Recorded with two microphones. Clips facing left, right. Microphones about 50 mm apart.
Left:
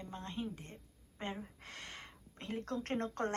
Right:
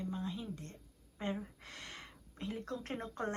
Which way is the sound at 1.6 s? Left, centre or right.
Left.